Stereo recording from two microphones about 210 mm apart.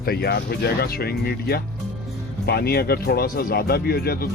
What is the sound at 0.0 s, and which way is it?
Speech, 50° left (ahead or behind).